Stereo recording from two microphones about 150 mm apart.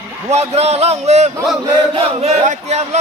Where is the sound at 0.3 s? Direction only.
45° right (ahead or behind).